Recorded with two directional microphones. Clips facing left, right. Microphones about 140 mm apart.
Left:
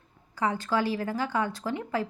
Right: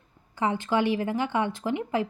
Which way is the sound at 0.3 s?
20° right (ahead or behind).